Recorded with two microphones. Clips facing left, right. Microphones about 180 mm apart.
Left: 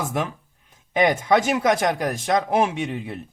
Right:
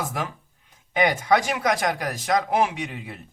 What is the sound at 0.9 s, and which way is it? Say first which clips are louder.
Speech: left 2 dB; 25° left (ahead or behind).